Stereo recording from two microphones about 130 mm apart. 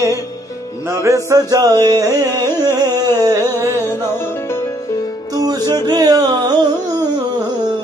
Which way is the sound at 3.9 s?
20° left (ahead or behind).